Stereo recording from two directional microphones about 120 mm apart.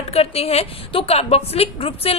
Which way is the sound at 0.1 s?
55° left (ahead or behind).